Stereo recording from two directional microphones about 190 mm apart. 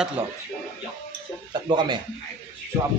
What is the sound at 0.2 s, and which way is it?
Speech, 10° right (ahead or behind).